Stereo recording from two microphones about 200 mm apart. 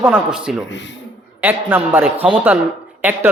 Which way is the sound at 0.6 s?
60° left (ahead or behind).